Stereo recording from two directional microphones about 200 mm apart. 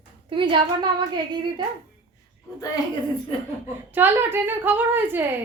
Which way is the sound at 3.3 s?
30° left (ahead or behind).